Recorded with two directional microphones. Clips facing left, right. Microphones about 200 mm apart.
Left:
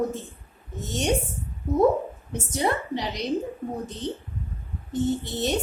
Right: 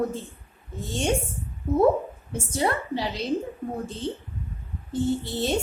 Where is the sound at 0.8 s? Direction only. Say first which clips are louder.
Even; 20° left (ahead or behind).